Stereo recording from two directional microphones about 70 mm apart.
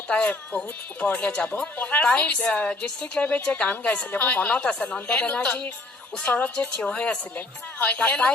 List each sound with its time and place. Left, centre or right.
0.1 s a woman's voice: centre